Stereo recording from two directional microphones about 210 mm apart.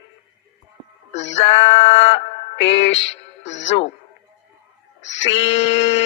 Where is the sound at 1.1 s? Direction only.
30° left (ahead or behind).